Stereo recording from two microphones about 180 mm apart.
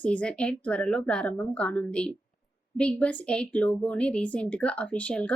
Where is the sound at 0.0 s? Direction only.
5° left (ahead or behind).